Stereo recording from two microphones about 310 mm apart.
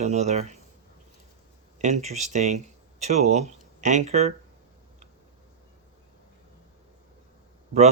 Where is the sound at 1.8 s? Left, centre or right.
Right.